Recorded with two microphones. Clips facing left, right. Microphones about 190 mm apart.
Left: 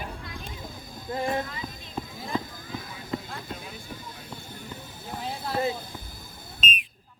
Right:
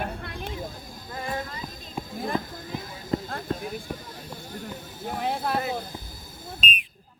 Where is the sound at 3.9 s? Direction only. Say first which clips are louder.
Right 5 dB; 55° right (ahead or behind).